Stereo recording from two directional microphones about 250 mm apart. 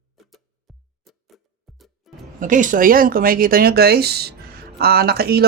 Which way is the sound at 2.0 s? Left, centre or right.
Centre.